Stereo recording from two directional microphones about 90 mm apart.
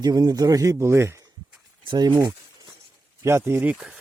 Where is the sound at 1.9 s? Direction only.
55° right (ahead or behind).